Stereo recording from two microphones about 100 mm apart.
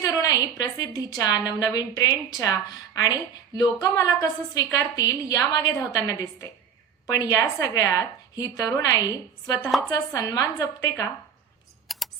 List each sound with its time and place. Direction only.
0.0 s a sound: 40° left (ahead or behind)
0.8 s a woman's voice: 40° left (ahead or behind)
9.7 s speech: centre (ahead or behind)
10.2 s a woman's voice: 35° left (ahead or behind)
11.9 s typing: centre (ahead or behind)